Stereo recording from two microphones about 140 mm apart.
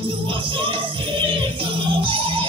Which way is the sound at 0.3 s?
35° right (ahead or behind).